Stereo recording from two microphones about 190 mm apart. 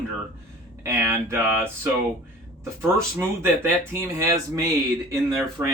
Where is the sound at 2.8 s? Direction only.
15° right (ahead or behind).